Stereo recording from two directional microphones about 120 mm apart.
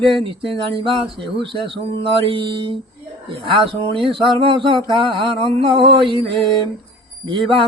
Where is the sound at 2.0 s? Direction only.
45° right (ahead or behind).